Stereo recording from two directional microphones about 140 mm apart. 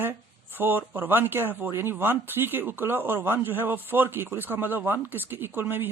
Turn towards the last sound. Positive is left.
turn(degrees=-15)  # may be behind; listen again after turning